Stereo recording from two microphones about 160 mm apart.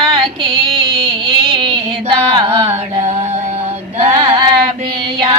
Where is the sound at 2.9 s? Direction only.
40° right (ahead or behind).